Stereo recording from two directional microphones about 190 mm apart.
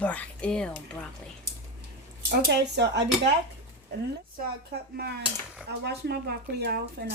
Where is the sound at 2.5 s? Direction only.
60° right (ahead or behind).